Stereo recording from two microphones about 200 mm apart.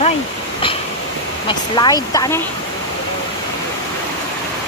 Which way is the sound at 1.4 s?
20° left (ahead or behind).